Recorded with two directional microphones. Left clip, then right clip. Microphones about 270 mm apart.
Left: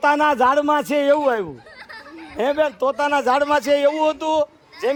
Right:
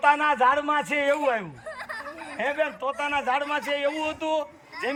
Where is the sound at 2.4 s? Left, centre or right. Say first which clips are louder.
Left 8 dB; centre.